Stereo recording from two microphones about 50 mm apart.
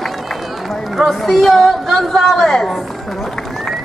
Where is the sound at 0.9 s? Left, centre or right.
Centre.